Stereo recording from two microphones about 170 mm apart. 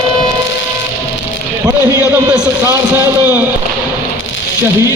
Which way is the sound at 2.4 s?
20° right (ahead or behind).